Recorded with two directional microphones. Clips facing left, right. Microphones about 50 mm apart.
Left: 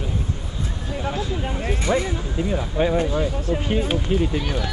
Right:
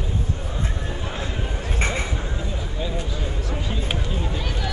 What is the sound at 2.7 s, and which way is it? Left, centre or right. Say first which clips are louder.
Speech: left 12 dB; left.